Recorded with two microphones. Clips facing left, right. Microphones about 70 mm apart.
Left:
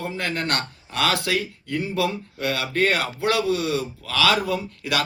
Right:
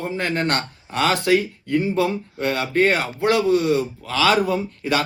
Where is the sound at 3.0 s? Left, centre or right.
Left.